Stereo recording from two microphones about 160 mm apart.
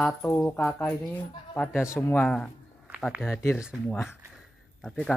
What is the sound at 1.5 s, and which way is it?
Speech, 10° left (ahead or behind).